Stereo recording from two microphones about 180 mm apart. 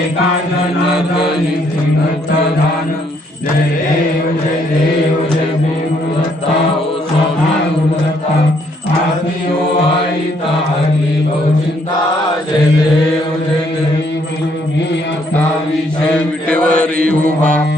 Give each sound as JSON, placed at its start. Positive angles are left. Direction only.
{"t": 16.5, "sound": "mantra", "side_deg": 5}
{"t": 17.0, "sound": "mantra", "side_deg": -50}